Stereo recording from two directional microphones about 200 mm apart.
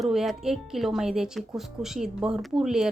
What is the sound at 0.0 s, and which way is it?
Speech, centre (ahead or behind).